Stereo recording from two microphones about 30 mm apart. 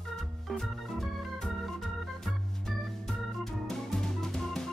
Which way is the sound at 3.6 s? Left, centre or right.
Centre.